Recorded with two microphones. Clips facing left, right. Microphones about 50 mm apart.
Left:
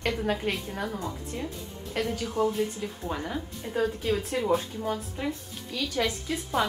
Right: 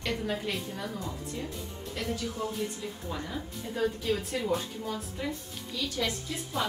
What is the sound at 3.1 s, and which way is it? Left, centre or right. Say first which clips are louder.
Speech: left 4 dB; left.